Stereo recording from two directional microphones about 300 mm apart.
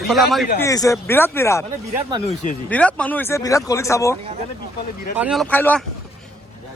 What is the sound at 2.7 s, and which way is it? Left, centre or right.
Speech, centre.